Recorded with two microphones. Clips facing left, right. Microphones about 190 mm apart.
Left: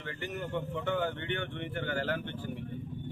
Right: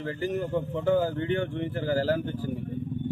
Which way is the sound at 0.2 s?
35° right (ahead or behind).